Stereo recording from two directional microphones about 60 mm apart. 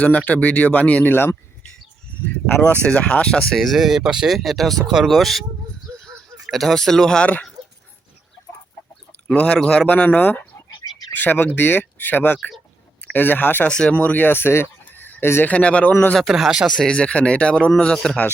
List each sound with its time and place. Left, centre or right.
0.3 s speech: left
2.2 s speech: left
3.6 s speech: centre
6.5 s speech: centre
9.2 s speech: centre
13.7 s speech: centre
13.9 s speech: left
15.4 s speech: centre
16.1 s speech: centre
16.6 s speech: centre